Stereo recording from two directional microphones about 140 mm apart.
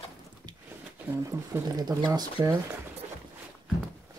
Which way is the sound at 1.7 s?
30° right (ahead or behind).